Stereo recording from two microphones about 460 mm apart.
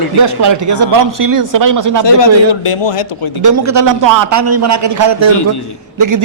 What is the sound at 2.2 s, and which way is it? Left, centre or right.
Speech, left.